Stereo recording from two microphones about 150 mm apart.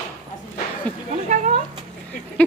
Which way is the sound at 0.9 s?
10° left (ahead or behind).